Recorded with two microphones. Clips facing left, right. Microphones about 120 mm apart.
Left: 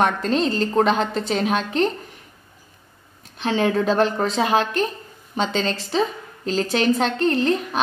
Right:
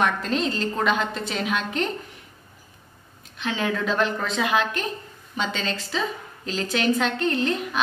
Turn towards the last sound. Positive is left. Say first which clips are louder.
# left 4 dB
turn(degrees=35)  # may be behind; listen again after turning